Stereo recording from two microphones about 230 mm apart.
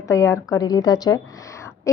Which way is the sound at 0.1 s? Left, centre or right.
Centre.